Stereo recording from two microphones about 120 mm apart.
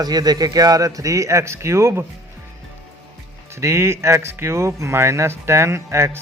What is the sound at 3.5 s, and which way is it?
A man's voice, 25° right (ahead or behind).